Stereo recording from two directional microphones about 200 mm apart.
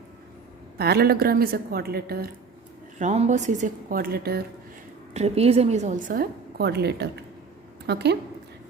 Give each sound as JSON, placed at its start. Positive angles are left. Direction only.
{"t": 0.8, "sound": "a woman's voice", "side_deg": -50}
{"t": 3.0, "sound": "a woman's voice", "side_deg": -35}
{"t": 5.1, "sound": "a woman's voice", "side_deg": -30}